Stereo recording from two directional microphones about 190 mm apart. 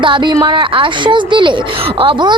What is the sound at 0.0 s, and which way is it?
A woman's voice, 25° right (ahead or behind).